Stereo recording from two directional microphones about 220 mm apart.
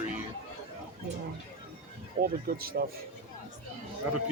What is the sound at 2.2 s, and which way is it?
Speech, 40° right (ahead or behind).